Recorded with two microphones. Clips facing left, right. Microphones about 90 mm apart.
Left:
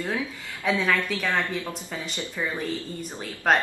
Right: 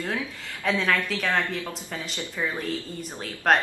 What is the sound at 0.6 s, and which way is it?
Speech, 5° left (ahead or behind).